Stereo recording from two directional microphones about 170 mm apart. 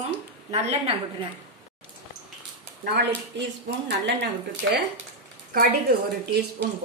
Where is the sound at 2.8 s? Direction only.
85° right.